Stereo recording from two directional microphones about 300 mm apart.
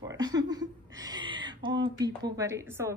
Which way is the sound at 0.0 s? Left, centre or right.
Centre.